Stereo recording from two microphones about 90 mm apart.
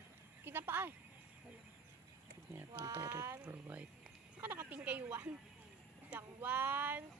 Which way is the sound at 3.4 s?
15° right (ahead or behind).